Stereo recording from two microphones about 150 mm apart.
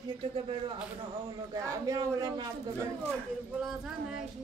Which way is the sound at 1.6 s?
20° right (ahead or behind).